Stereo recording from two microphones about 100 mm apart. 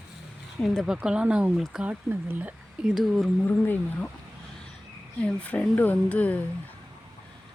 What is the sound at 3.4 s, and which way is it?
Speech, 20° left (ahead or behind).